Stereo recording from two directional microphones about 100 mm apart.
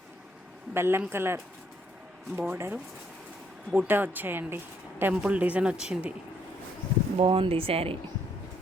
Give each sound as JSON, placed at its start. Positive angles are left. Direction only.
{"t": 0.7, "sound": "speech", "side_deg": -25}
{"t": 7.2, "sound": "speech", "side_deg": -65}